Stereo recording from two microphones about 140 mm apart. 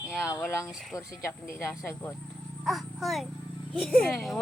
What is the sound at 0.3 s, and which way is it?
Speech, 20° left (ahead or behind).